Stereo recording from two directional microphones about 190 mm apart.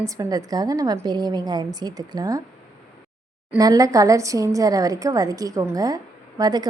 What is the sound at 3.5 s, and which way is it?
Speech, 20° right (ahead or behind).